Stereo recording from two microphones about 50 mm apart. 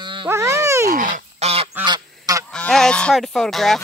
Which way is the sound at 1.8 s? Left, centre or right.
Right.